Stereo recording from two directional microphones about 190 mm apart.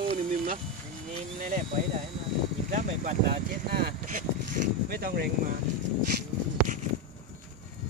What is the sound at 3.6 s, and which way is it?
Speech, 55° right (ahead or behind).